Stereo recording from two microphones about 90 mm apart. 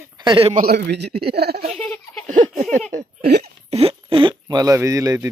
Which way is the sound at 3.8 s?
85° right.